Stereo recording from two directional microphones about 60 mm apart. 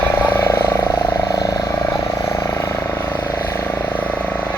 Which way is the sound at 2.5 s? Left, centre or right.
Left.